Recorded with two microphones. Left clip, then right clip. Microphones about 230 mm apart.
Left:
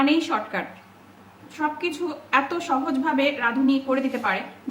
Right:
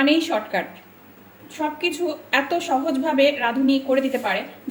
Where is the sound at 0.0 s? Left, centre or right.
Centre.